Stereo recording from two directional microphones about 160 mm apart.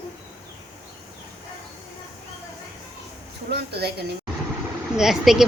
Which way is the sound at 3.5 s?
90° right.